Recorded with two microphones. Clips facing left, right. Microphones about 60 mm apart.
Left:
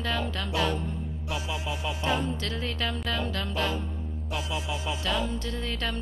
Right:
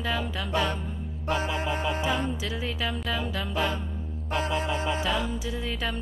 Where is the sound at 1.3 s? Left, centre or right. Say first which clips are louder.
Right 6 dB; right.